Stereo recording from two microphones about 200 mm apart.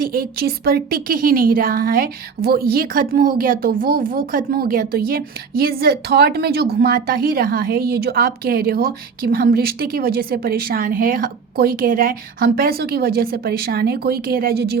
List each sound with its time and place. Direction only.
0.0 s speech: 45° right (ahead or behind)